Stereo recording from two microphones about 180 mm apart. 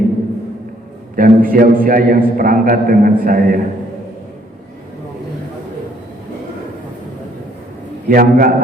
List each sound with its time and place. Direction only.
1.1 s a man's voice: 50° right (ahead or behind)
8.0 s a man's voice: 55° right (ahead or behind)